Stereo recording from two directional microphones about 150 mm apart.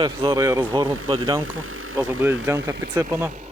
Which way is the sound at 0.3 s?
20° right (ahead or behind).